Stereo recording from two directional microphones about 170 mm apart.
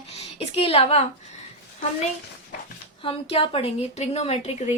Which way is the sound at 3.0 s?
35° left (ahead or behind).